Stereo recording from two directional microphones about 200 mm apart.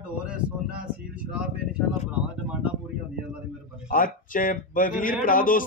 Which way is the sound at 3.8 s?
45° left (ahead or behind).